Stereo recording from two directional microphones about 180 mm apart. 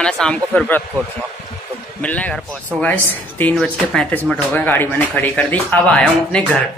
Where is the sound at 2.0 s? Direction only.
10° left (ahead or behind).